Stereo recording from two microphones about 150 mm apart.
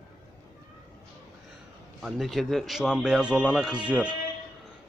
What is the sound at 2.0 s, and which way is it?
A man's voice, centre (ahead or behind).